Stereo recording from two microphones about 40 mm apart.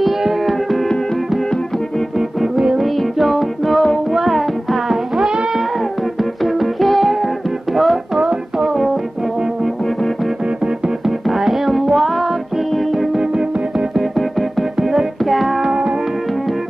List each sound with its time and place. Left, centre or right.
0.0 s music: centre
2.1 s music: centre
11.1 s music: centre
13.2 s music: centre
15.6 s music: centre